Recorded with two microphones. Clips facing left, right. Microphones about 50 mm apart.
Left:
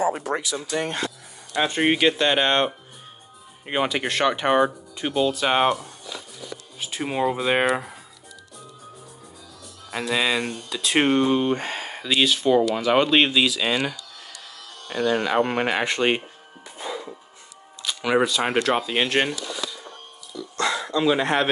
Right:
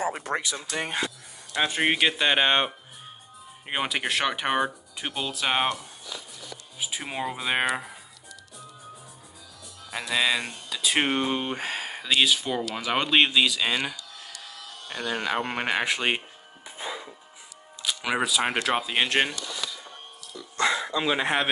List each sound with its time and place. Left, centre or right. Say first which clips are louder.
0.0 s speech: left 4 dB; right
0.7 s speech: left 5 dB; centre
9.8 s speech: left 2 dB; centre
16.7 s music: left 3 dB; centre
17.8 s speech: left 5 dB; centre
20.3 s a sound: even; centre